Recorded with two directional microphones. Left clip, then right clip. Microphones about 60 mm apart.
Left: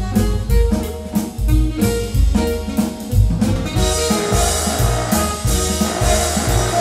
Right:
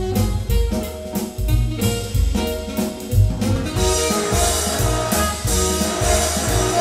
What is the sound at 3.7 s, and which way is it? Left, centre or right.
Music, right.